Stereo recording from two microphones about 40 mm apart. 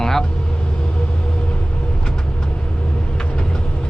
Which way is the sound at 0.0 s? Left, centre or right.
Centre.